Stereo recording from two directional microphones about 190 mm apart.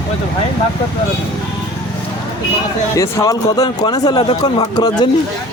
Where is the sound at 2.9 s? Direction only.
15° left (ahead or behind).